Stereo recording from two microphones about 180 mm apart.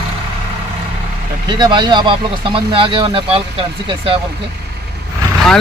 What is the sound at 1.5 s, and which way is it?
Speech, 25° right (ahead or behind).